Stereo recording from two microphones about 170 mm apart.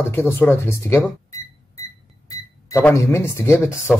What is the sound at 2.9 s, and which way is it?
Speech, 15° left (ahead or behind).